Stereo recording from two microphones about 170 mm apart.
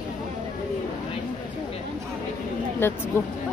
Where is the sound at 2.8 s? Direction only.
15° left (ahead or behind).